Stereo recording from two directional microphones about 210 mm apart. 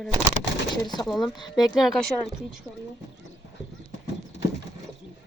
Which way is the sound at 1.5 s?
Centre (ahead or behind).